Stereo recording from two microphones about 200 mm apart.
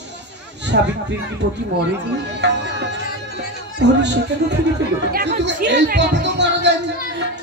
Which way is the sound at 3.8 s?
60° right (ahead or behind).